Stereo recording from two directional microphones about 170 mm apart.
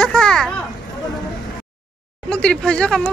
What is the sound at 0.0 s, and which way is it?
Children playing, 5° left (ahead or behind).